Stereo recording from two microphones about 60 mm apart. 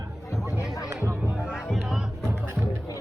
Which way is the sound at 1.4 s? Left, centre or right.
Centre.